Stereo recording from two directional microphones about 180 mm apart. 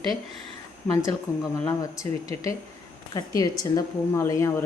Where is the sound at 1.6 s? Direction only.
20° left (ahead or behind).